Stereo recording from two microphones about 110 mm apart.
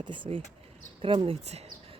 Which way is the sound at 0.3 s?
80° right.